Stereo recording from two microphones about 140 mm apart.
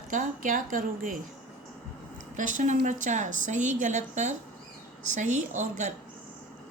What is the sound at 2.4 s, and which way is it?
Speech, 65° right (ahead or behind).